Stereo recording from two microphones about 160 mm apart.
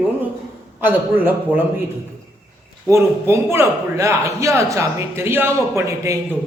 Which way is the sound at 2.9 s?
15° right (ahead or behind).